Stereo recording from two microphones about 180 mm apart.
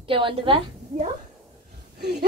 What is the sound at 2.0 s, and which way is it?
Speech, 65° right (ahead or behind).